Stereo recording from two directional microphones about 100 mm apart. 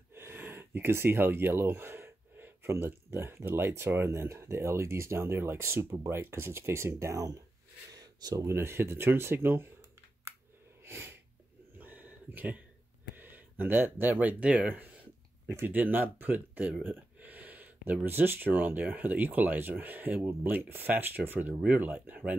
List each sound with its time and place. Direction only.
0.1 s speech: 25° right (ahead or behind)
7.9 s a sound: 40° right (ahead or behind)
8.5 s speech: 25° right (ahead or behind)
10.8 s sneeze: 25° right (ahead or behind)
11.8 s a sound: 15° right (ahead or behind)
14.2 s speech: 10° right (ahead or behind)